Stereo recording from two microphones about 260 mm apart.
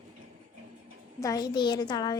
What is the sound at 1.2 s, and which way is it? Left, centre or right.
Speech, centre.